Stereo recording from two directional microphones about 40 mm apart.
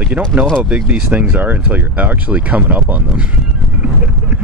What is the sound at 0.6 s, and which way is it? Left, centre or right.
Speech, right.